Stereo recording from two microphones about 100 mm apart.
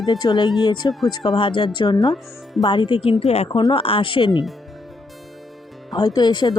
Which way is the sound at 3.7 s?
60° left (ahead or behind).